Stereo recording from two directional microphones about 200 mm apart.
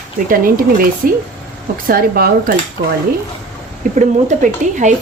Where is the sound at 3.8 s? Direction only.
40° right (ahead or behind).